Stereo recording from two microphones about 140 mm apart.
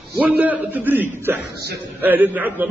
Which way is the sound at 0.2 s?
10° right (ahead or behind).